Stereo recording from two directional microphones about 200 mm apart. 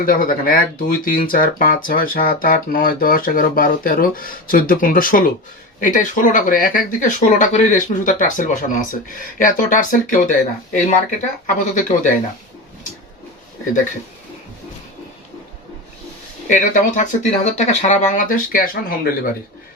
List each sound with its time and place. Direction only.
0.0 s speech: 45° left (ahead or behind)
16.5 s speech: 40° left (ahead or behind)